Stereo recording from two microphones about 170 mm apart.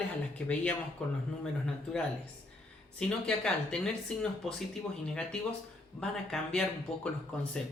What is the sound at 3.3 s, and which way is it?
Speech, 5° left (ahead or behind).